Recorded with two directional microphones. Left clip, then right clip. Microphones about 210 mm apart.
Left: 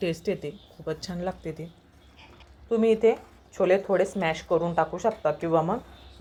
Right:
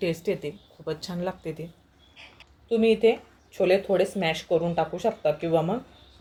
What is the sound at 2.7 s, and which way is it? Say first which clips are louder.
Speech: right 1 dB; 5° left (ahead or behind).